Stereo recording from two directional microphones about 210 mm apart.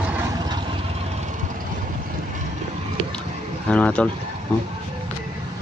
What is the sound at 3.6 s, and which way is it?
Speech, 5° left (ahead or behind).